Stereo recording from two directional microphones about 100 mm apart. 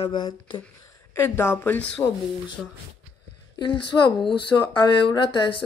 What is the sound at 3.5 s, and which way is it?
A woman's voice, 50° left (ahead or behind).